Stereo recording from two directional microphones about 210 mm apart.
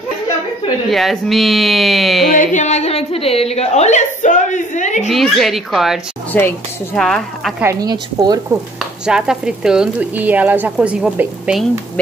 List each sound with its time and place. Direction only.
0.8 s a woman's voice: centre (ahead or behind)
2.3 s a woman's voice: 35° left (ahead or behind)
5.0 s a woman's voice: centre (ahead or behind)
7.6 s speech: 15° right (ahead or behind)
9.0 s a woman's voice: 5° right (ahead or behind)